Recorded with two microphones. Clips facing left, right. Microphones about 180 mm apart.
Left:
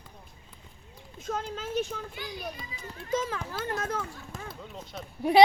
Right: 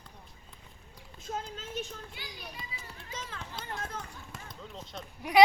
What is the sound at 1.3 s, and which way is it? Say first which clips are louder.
Speech: left 4 dB; 65° left (ahead or behind).